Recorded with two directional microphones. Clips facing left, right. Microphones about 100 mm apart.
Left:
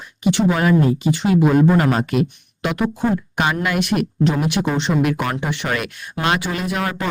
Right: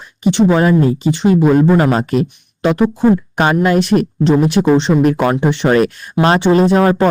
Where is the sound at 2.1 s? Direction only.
35° right (ahead or behind).